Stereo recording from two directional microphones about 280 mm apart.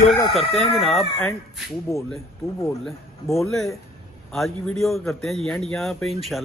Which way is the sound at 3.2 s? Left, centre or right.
Centre.